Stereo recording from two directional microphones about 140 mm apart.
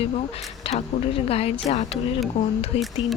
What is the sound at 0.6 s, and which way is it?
Speech, 45° left (ahead or behind).